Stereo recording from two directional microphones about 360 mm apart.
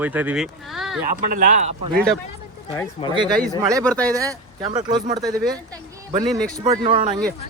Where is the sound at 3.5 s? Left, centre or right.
Centre.